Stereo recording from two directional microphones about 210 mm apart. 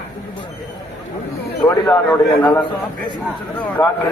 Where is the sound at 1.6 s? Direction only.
5° left (ahead or behind).